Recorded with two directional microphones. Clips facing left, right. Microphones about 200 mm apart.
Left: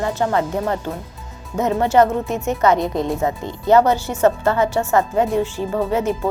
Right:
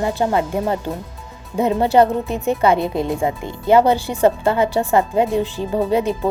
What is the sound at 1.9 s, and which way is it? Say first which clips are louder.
Speech: even; 20° right (ahead or behind).